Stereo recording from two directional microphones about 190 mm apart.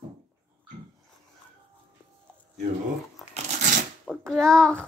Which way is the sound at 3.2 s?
Centre (ahead or behind).